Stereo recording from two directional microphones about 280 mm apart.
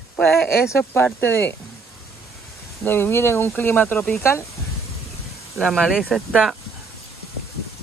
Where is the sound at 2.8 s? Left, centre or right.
Centre.